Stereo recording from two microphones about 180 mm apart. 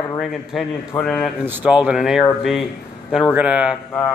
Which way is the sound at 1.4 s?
10° right (ahead or behind).